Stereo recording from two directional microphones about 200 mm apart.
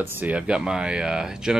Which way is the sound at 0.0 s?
10° right (ahead or behind).